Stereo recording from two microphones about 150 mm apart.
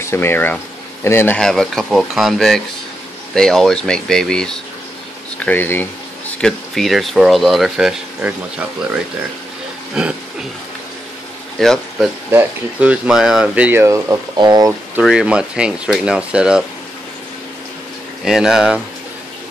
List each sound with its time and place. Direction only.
0.0 s speech: 15° left (ahead or behind); by 8.6 s 10° right (ahead or behind)
10.0 s speech: 5° right (ahead or behind)
11.6 s speech: 5° left (ahead or behind)
12.3 s speech: 10° right (ahead or behind)
14.3 s speech: 30° right (ahead or behind)
15.0 s speech: 5° right (ahead or behind)
18.2 s speech: 5° right (ahead or behind)